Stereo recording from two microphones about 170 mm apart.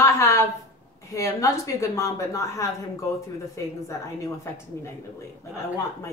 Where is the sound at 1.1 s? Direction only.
20° left (ahead or behind).